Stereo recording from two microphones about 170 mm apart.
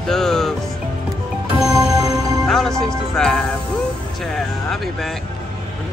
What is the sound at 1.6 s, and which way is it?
Music, 20° right (ahead or behind).